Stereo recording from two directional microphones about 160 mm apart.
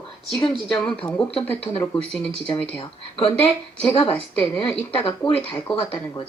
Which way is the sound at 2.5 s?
35° left (ahead or behind).